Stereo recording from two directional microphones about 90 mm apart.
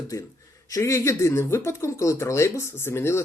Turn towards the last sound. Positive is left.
turn(degrees=30)  # may be behind; listen again after turning